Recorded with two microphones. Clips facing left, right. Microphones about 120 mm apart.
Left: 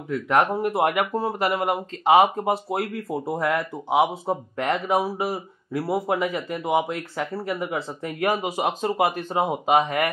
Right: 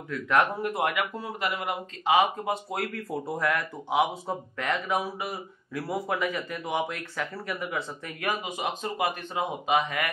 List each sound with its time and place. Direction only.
0.1 s speech: 30° left (ahead or behind)